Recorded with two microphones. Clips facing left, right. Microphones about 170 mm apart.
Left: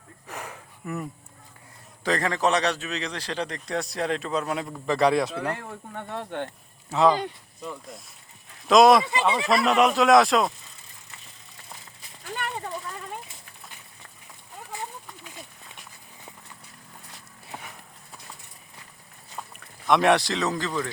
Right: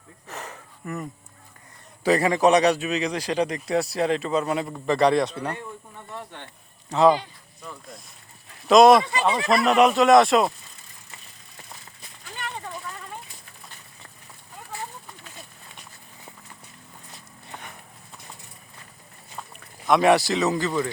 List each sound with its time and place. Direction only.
0.3 s a sound: 10° left (ahead or behind)
2.0 s speech: 10° right (ahead or behind)
5.5 s speech: 75° left (ahead or behind)
6.9 s speech: 5° left (ahead or behind)
8.6 s speech: centre (ahead or behind)
17.5 s clip-clop: 5° left (ahead or behind)
19.4 s speech: centre (ahead or behind)